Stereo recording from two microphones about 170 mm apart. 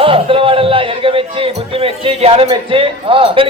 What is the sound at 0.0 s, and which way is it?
A man's voice, 30° right (ahead or behind).